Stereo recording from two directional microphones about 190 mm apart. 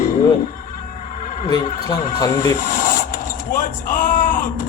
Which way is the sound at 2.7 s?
45° left (ahead or behind).